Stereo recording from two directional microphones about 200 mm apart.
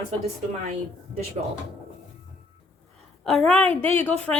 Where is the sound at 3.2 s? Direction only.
5° left (ahead or behind).